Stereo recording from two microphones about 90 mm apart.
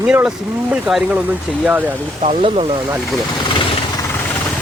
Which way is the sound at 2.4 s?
75° right (ahead or behind).